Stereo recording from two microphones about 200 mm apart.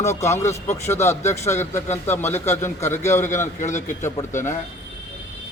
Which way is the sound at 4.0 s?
15° left (ahead or behind).